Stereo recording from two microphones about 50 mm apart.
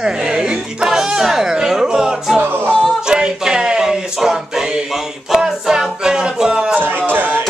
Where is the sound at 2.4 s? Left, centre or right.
Right.